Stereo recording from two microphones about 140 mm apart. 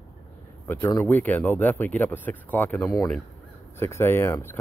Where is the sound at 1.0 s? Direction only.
10° left (ahead or behind).